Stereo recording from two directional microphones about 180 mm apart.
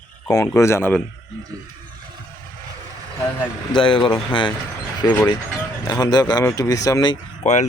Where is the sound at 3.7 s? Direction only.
30° left (ahead or behind).